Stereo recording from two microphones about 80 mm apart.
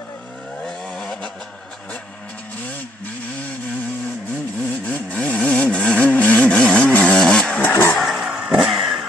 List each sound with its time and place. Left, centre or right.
0.7 s vehicle: centre
4.8 s sawing: centre
6.9 s chainsaw: centre
7.7 s vehicle: left
8.0 s vehicle: centre
8.3 s vehicle: centre